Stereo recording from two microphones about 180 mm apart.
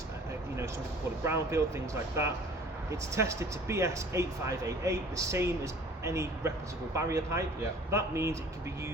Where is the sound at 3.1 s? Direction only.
15° right (ahead or behind).